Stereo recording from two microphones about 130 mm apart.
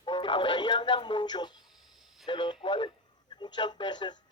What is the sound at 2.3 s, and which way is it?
A man's voice, 35° left (ahead or behind).